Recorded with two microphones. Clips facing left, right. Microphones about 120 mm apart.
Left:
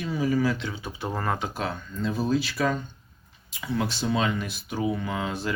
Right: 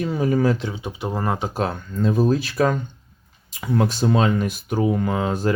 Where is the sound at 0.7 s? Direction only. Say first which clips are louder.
Right 4 dB; 20° right (ahead or behind).